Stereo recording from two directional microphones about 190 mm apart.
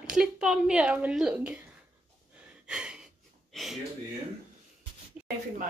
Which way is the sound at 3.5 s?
5° left (ahead or behind).